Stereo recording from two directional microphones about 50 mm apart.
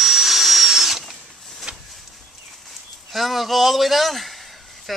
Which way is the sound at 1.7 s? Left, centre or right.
Right.